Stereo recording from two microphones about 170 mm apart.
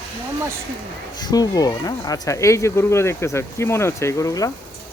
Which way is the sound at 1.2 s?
20° left (ahead or behind).